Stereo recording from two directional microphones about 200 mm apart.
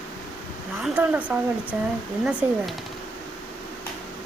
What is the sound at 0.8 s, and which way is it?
A woman's voice, 5° right (ahead or behind).